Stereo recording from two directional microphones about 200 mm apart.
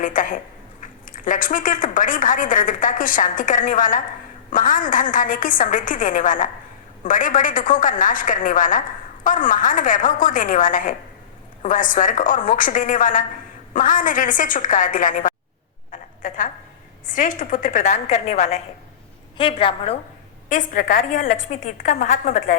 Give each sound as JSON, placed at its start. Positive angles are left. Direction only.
{"t": 0.0, "sound": "speech", "side_deg": 40}
{"t": 15.9, "sound": "a sound", "side_deg": 40}
{"t": 17.1, "sound": "a woman's voice", "side_deg": 40}
{"t": 20.5, "sound": "a woman's voice", "side_deg": 40}